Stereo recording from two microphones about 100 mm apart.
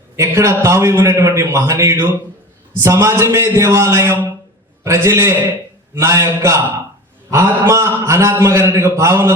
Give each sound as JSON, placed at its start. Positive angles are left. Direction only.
{"t": 0.2, "sound": "a man's voice", "side_deg": -30}